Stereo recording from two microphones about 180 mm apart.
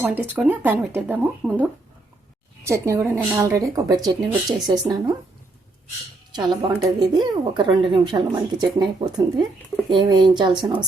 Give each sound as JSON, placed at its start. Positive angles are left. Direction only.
{"t": 0.0, "sound": "a woman's voice", "side_deg": -10}
{"t": 6.3, "sound": "speech", "side_deg": -25}